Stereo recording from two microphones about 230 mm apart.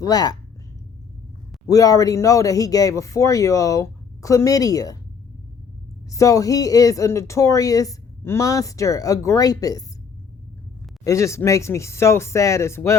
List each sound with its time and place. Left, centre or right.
0.0 s speech: centre
1.6 s speech: centre
6.1 s speech: centre
11.0 s speech: centre